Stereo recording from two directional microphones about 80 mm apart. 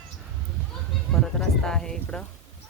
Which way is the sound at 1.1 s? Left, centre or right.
Centre.